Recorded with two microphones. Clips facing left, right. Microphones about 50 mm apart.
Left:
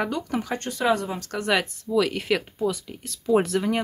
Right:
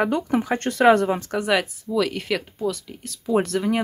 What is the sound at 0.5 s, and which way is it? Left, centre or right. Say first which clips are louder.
Speech: right 8 dB; right.